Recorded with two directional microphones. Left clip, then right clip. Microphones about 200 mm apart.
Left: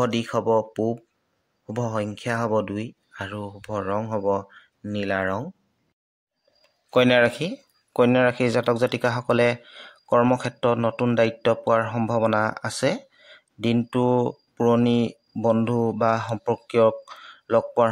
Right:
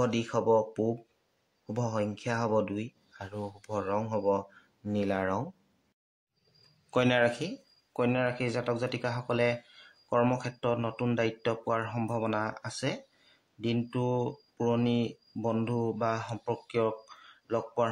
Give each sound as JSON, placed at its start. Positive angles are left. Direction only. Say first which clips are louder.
{"t": 0.0, "sound": "speech", "louder": "left 5 dB", "side_deg": 25}
{"t": 6.9, "sound": "speech", "louder": "left 8 dB", "side_deg": 30}